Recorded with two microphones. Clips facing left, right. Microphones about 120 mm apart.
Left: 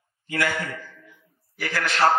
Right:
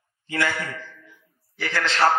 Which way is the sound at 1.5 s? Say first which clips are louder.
Right 1 dB; 25° right (ahead or behind).